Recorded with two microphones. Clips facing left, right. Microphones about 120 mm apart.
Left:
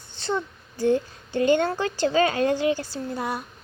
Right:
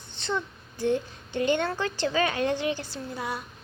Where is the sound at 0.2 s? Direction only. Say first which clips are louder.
Left 3 dB; 40° left (ahead or behind).